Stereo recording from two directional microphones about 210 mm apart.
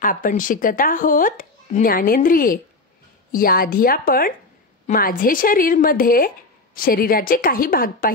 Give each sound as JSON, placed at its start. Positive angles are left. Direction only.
{"t": 0.0, "sound": "speech", "side_deg": 40}